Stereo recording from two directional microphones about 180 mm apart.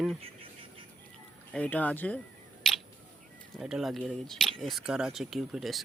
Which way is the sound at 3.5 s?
Centre (ahead or behind).